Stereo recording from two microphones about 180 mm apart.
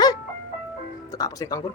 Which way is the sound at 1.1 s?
20° left (ahead or behind).